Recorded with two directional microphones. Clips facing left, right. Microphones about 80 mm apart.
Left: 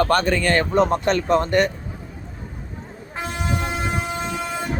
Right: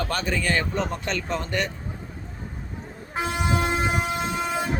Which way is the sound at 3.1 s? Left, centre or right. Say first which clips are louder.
Right 2 dB; centre.